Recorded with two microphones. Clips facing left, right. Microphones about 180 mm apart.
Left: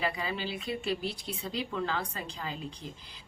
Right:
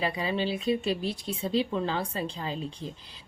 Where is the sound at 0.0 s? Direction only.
25° right (ahead or behind).